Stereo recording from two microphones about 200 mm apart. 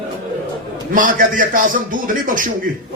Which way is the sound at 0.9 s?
45° right (ahead or behind).